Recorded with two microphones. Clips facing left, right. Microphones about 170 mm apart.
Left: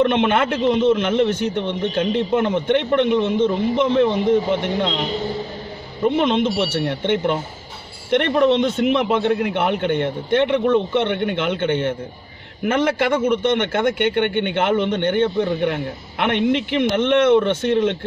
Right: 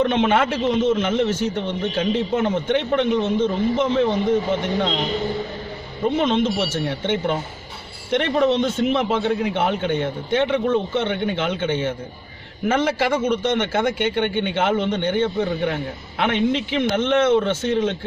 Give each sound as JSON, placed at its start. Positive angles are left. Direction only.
{"t": 0.0, "sound": "a man's voice", "side_deg": 60}
{"t": 6.1, "sound": "a man's voice", "side_deg": 60}